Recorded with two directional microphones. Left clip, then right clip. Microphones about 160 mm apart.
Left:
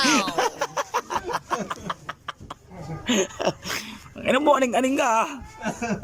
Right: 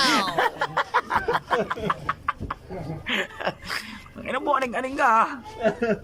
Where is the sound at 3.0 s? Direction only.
25° left (ahead or behind).